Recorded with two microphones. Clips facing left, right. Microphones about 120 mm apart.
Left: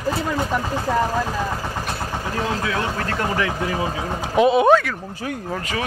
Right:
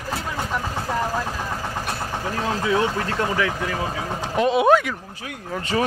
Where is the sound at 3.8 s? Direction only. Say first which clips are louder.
Left 2 dB; 10° left (ahead or behind).